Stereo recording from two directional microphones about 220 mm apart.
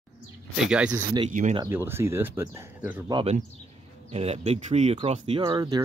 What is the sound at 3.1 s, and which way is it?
Speech, 25° right (ahead or behind).